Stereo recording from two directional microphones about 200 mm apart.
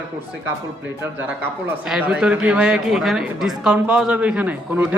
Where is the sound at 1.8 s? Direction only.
5° right (ahead or behind).